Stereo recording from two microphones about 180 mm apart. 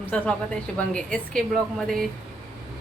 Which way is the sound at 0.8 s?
5° left (ahead or behind).